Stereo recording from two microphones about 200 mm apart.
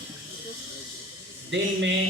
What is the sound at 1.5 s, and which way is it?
Speech, 65° right (ahead or behind).